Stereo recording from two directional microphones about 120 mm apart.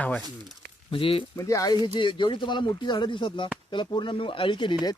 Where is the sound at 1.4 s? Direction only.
25° left (ahead or behind).